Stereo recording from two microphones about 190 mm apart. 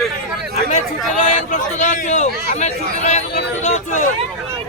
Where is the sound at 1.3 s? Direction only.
40° left (ahead or behind).